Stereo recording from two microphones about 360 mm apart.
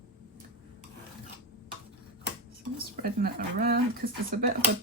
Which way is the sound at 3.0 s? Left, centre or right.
Right.